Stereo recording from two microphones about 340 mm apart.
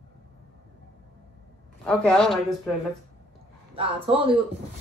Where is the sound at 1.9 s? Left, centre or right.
Centre.